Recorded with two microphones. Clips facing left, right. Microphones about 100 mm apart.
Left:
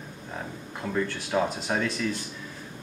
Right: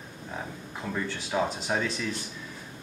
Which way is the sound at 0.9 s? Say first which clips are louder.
Left 3 dB; centre (ahead or behind).